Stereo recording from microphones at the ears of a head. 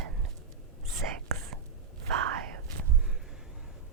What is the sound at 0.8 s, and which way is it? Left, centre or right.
Whispering, right.